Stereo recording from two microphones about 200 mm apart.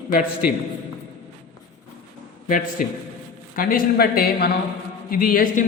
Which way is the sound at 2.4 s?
40° left (ahead or behind).